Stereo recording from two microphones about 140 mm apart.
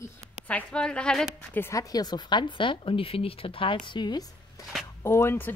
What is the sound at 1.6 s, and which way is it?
A woman's voice, 25° left (ahead or behind).